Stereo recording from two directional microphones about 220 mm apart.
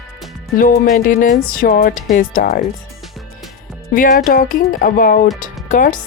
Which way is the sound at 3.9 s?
40° left (ahead or behind).